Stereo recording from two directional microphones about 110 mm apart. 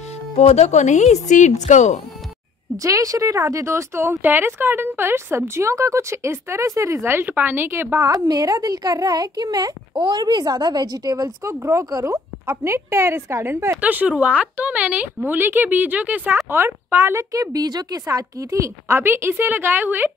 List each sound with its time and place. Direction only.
0.4 s speech: 90° left
2.8 s speech: 30° right (ahead or behind)